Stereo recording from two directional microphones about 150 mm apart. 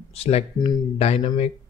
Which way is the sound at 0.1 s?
40° left (ahead or behind).